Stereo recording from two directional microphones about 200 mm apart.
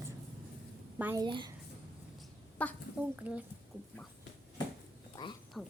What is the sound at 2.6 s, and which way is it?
Speech, 5° left (ahead or behind).